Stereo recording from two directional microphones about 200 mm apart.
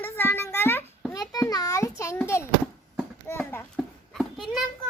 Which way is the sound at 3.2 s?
10° left (ahead or behind).